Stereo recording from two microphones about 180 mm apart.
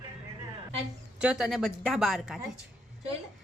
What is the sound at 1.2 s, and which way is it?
Speech, 5° right (ahead or behind).